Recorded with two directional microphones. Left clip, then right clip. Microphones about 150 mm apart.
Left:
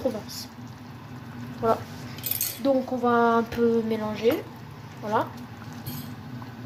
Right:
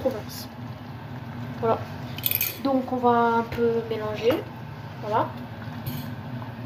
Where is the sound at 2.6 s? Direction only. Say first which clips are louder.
Right 1 dB; 60° left (ahead or behind).